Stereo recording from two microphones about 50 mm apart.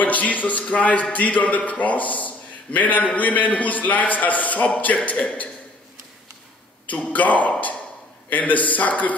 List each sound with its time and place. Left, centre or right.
0.0 s a man's voice: left
6.9 s a man's voice: left